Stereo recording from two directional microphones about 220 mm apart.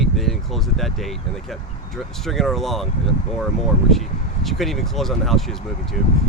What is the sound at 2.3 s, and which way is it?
Speech, centre (ahead or behind).